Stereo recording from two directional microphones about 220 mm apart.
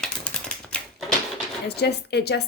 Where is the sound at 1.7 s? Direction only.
50° left (ahead or behind).